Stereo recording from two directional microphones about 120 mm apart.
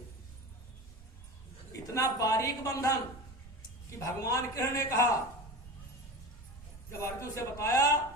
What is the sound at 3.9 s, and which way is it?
A man's voice, 25° left (ahead or behind).